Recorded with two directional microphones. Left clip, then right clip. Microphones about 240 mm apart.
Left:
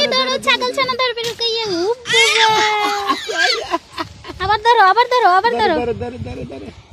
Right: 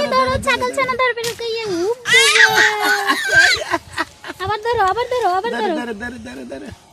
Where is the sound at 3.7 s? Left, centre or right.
Centre.